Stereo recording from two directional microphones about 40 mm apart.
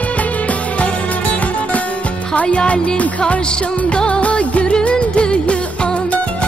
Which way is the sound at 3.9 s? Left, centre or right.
Left.